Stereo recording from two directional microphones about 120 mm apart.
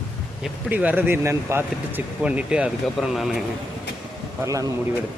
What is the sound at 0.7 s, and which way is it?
Speech, 15° right (ahead or behind).